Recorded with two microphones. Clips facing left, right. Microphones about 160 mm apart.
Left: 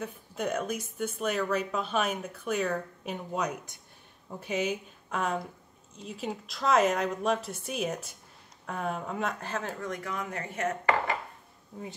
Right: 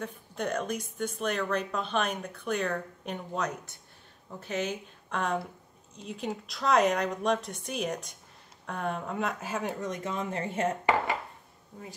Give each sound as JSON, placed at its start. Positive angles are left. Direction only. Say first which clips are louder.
{"t": 0.0, "sound": "a woman's voice", "louder": "left 1 dB", "side_deg": 5}